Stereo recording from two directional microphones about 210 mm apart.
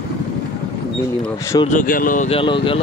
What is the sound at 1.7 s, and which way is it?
Speech, 40° left (ahead or behind).